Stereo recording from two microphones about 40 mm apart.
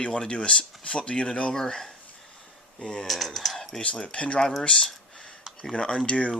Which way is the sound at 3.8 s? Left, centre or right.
Left.